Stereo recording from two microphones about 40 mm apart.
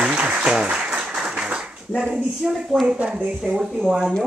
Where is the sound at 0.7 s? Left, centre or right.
Right.